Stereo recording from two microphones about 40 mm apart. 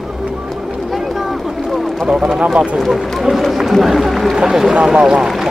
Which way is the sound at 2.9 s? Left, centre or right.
Centre.